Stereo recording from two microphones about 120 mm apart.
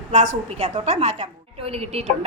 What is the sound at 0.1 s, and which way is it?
A woman's voice, 90° right.